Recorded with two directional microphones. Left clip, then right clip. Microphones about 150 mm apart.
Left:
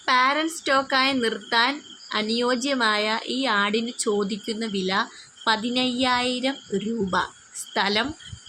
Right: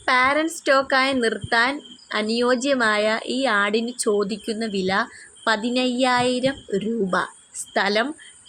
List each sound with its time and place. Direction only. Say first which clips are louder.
0.0 s speech: right 2 dB; 30° right (ahead or behind)